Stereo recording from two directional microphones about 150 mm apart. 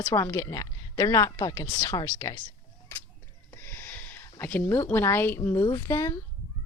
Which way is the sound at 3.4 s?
15° left (ahead or behind).